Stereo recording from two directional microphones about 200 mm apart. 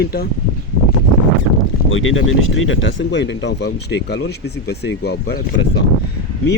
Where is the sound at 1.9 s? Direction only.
75° left (ahead or behind).